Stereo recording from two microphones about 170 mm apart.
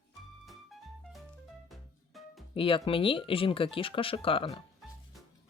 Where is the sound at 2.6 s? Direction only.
30° left (ahead or behind).